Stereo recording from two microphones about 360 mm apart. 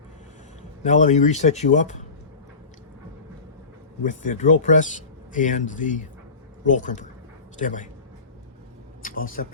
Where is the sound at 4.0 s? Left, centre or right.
Left.